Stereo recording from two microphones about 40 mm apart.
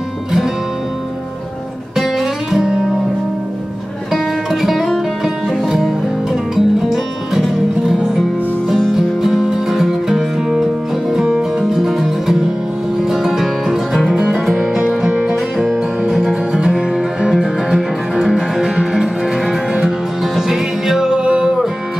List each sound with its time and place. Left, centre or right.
2.0 s music: centre
2.6 s music: right
4.1 s music: centre
15.2 s music: centre
21.1 s music: centre